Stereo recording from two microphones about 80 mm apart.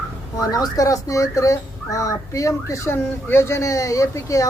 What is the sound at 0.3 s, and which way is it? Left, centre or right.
Speech, left.